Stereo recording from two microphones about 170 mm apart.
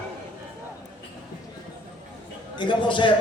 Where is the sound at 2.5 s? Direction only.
30° left (ahead or behind).